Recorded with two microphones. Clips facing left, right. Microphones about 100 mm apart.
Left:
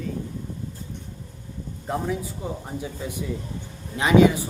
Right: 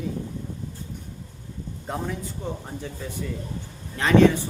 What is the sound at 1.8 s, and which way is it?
A man's voice, centre (ahead or behind).